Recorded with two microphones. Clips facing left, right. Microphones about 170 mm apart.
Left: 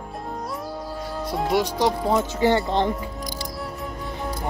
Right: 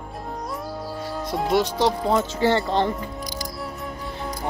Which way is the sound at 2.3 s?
15° left (ahead or behind).